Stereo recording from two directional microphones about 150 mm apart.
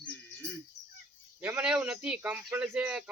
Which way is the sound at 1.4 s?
10° right (ahead or behind).